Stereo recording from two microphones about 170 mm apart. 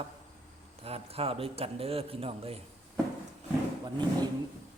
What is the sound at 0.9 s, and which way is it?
A man's voice, 35° right (ahead or behind).